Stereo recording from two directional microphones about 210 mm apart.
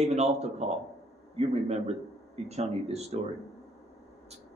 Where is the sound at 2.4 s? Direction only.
30° right (ahead or behind).